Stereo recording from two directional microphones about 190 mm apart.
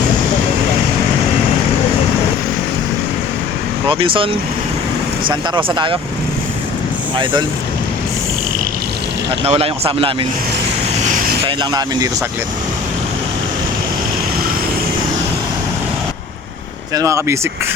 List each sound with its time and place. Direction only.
3.8 s speech: 25° right (ahead or behind)
9.4 s speech: 30° right (ahead or behind)
11.1 s vehicle: 45° right (ahead or behind)
11.4 s speech: 20° right (ahead or behind)
16.9 s speech: 15° right (ahead or behind)